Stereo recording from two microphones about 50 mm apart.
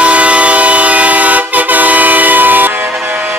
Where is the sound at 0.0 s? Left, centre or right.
Right.